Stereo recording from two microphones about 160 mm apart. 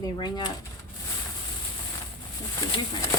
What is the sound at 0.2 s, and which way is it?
Speech, 30° left (ahead or behind).